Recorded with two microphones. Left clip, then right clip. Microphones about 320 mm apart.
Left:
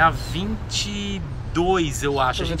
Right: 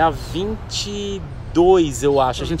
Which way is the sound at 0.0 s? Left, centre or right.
Centre.